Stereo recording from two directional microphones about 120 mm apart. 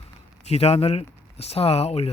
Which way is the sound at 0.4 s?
60° left (ahead or behind).